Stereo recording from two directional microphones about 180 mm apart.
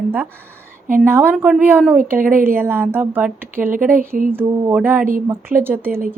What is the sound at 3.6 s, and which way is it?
Speech, 50° right (ahead or behind).